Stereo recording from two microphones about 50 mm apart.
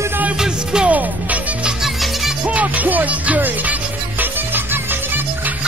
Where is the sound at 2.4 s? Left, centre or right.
Right.